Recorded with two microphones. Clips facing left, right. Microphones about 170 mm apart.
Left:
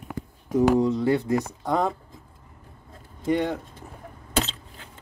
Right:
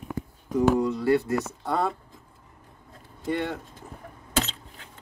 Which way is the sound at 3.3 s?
10° left (ahead or behind).